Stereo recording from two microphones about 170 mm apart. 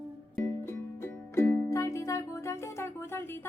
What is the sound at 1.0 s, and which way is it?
Music, 15° left (ahead or behind).